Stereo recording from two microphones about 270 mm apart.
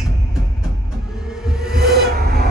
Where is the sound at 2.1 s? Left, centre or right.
Right.